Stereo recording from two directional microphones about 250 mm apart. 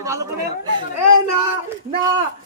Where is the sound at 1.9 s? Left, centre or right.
Centre.